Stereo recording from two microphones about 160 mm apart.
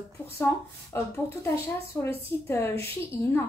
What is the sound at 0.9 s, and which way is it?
Speech, 15° left (ahead or behind).